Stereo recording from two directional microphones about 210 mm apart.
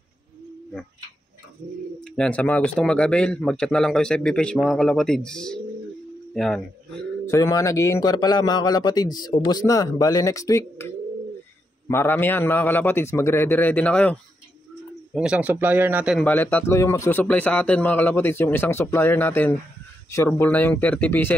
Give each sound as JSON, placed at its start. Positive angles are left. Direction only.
{"t": 2.0, "sound": "a man's voice", "side_deg": 5}
{"t": 7.2, "sound": "a man's voice", "side_deg": 15}
{"t": 11.9, "sound": "a man's voice", "side_deg": 10}
{"t": 15.1, "sound": "speech", "side_deg": -5}
{"t": 16.2, "sound": "a man's voice", "side_deg": 10}